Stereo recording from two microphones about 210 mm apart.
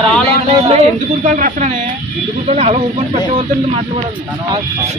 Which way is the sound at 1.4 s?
35° right (ahead or behind).